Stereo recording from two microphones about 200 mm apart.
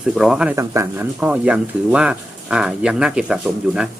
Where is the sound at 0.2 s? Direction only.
5° right (ahead or behind).